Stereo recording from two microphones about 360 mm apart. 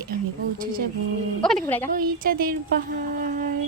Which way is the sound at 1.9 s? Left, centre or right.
Right.